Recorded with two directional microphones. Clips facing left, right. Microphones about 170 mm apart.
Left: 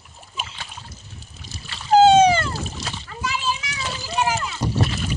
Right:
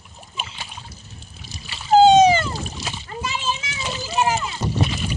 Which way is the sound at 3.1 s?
25° right (ahead or behind).